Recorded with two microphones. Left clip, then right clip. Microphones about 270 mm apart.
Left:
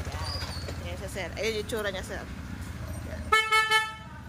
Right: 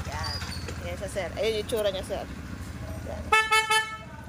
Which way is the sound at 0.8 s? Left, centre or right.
Centre.